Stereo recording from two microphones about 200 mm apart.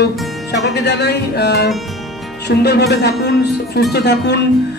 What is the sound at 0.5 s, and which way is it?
A man's voice, 55° left (ahead or behind).